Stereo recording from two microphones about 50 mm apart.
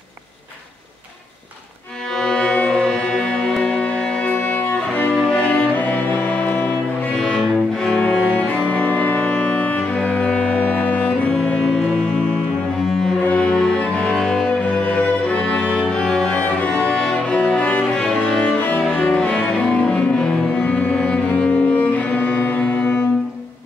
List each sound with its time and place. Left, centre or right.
2.1 s music: centre; by 5.1 s left
5.1 s music: centre
5.4 s music: left
5.8 s music: left
7.2 s cello: centre
8.5 s music: left
11.4 s music: centre
13.2 s music: left
14.9 s music: left
17.5 s music: left
19.1 s cello: centre
20.6 s music: left
20.9 s cello: centre; by 23.0 s left